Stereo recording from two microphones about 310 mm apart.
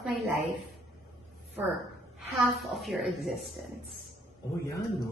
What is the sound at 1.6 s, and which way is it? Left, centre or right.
A woman's voice, centre.